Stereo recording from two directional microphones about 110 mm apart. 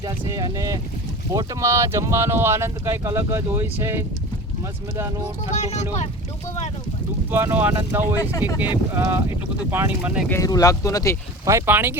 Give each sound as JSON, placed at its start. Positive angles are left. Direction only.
{"t": 0.0, "sound": "speech", "side_deg": -35}
{"t": 5.5, "sound": "speech", "side_deg": 90}
{"t": 7.3, "sound": "speech", "side_deg": -20}
{"t": 10.4, "sound": "speech", "side_deg": 30}
{"t": 11.4, "sound": "speech", "side_deg": -25}